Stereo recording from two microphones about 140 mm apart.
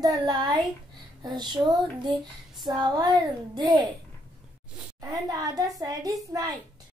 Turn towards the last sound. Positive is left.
turn(degrees=-25)  # may be behind; listen again after turning